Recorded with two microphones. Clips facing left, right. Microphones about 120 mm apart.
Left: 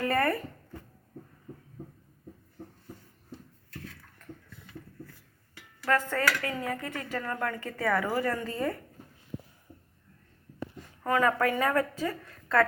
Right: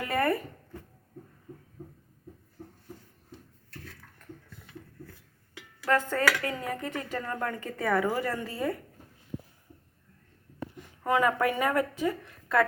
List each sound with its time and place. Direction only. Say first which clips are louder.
0.0 s a sound: even; 15° right (ahead or behind)
5.8 s a woman's voice: right 1 dB; 20° right (ahead or behind)
10.8 s a woman's voice: right 1 dB; 15° right (ahead or behind)